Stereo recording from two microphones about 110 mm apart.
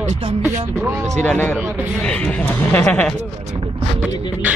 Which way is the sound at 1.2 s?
15° left (ahead or behind).